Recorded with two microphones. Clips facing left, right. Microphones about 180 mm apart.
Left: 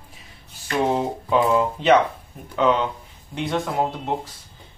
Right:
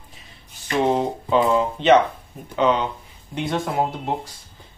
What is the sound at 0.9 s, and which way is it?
Speech, 5° left (ahead or behind).